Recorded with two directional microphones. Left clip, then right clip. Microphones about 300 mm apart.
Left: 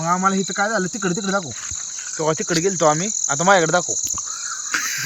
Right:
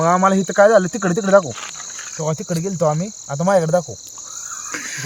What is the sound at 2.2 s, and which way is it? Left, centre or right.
Cricket, right.